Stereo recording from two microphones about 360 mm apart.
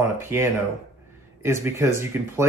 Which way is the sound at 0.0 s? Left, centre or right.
Centre.